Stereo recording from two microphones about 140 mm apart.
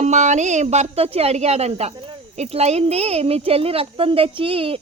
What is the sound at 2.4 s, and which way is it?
Speech, 50° right (ahead or behind).